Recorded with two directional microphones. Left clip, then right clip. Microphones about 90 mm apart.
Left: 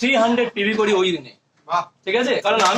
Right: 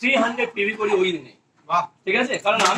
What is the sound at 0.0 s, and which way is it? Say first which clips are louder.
A man's voice: left 3 dB; 30° left (ahead or behind).